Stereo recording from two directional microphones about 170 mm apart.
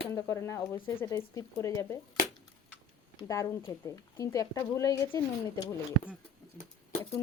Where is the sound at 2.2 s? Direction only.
55° left (ahead or behind).